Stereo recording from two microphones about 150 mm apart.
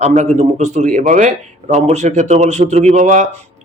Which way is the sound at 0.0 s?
50° right (ahead or behind).